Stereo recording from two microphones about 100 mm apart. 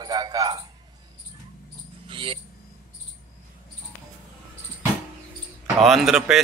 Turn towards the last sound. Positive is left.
turn(degrees=-5)  # may be behind; listen again after turning